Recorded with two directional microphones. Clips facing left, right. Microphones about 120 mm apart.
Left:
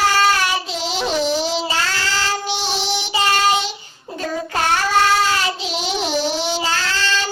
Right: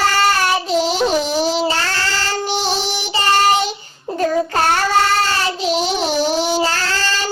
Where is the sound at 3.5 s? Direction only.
45° right (ahead or behind).